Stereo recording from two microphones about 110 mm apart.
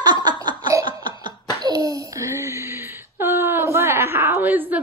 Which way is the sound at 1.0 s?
40° right (ahead or behind).